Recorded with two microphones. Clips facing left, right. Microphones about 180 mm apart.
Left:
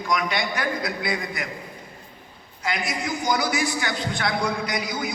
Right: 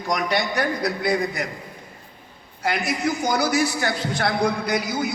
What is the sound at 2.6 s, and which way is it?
A man's voice, 45° right (ahead or behind).